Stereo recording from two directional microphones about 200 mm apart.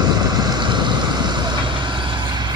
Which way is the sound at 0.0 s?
20° right (ahead or behind).